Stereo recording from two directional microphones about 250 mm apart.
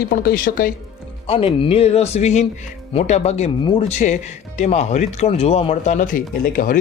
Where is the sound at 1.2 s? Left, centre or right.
Left.